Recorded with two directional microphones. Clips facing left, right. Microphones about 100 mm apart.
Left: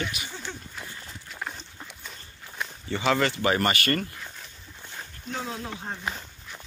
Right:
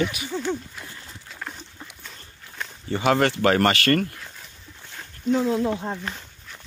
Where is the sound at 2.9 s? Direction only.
40° right (ahead or behind).